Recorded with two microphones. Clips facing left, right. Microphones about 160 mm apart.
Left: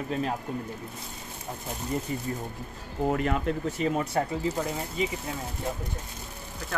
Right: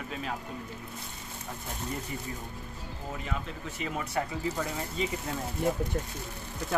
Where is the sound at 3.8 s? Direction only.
40° left (ahead or behind).